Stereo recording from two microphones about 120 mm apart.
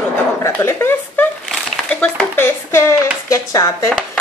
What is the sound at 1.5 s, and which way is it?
Speech, 10° left (ahead or behind).